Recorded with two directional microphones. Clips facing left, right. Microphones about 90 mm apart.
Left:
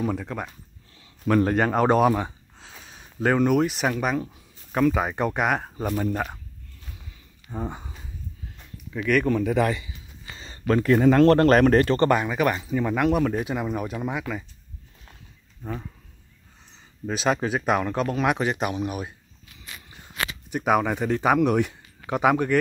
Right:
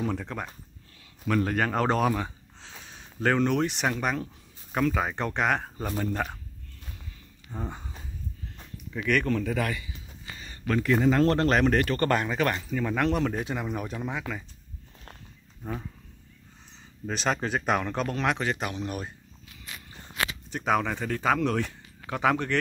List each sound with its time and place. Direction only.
0.0 s speech: 5° left (ahead or behind)
1.2 s speech: 40° left (ahead or behind)
1.6 s speech: 20° left (ahead or behind)
2.6 s speech: 5° left (ahead or behind)
7.5 s speech: 15° left (ahead or behind)
8.9 s speech: 5° left (ahead or behind); by 9.8 s 20° left (ahead or behind)
10.3 s a sound: 30° left (ahead or behind)
11.0 s speech: 60° left (ahead or behind)
11.8 s speech: 30° left (ahead or behind)
12.1 s speech: 10° left (ahead or behind)
17.0 s speech: 5° left (ahead or behind)
20.4 s speech: 10° left (ahead or behind)